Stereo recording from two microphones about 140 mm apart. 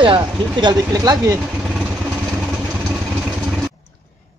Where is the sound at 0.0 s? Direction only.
35° right (ahead or behind).